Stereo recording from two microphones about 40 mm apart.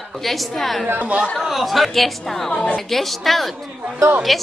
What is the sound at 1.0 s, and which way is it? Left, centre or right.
Speech, right.